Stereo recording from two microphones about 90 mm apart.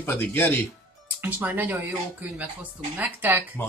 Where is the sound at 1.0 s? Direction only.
20° right (ahead or behind).